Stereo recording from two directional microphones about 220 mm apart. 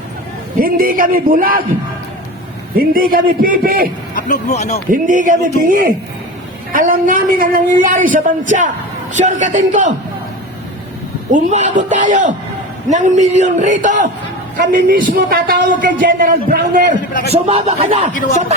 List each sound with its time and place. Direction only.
0.6 s a man's voice: 40° right (ahead or behind)
2.7 s a man's voice: 40° right (ahead or behind)
4.1 s speech: 35° left (ahead or behind)
4.9 s a man's voice: 35° right (ahead or behind)
11.3 s a man's voice: 35° right (ahead or behind)
17.3 s speech: 25° right (ahead or behind)